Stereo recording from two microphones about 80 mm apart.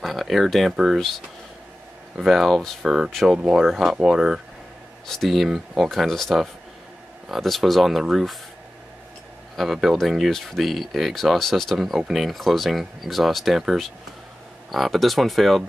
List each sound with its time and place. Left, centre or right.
0.0 s a sound: centre
0.7 s speech: centre
2.1 s speech: centre
9.6 s speech: centre